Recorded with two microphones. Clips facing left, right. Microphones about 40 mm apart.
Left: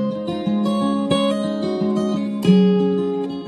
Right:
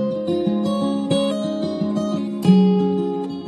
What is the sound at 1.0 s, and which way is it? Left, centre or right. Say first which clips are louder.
Music: left 1 dB; centre.